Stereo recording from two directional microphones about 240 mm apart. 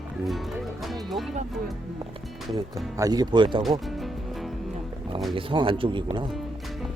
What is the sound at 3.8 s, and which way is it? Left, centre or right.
Music, centre.